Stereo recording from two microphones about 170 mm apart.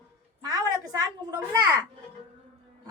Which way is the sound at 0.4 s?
20° right (ahead or behind).